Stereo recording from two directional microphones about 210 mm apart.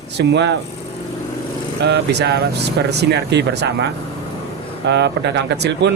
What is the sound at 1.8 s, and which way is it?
Speech, 55° right (ahead or behind).